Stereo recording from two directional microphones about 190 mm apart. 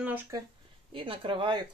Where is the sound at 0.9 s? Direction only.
25° right (ahead or behind).